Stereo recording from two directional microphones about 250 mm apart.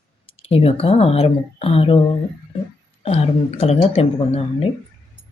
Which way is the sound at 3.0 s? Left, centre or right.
Left.